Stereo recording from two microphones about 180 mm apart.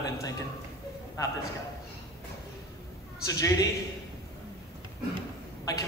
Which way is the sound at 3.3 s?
20° left (ahead or behind).